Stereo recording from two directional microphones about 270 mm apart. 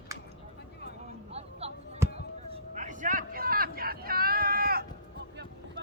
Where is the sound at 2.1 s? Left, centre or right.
Right.